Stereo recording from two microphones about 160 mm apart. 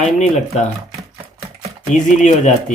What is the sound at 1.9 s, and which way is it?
Speech, 50° left (ahead or behind).